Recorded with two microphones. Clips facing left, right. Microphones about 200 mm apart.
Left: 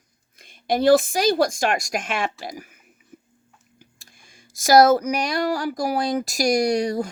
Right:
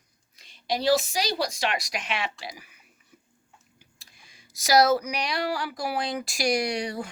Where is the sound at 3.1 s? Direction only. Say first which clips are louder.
Left 11 dB; 50° left (ahead or behind).